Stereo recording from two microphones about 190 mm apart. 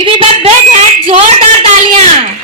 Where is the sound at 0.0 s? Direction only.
30° right (ahead or behind).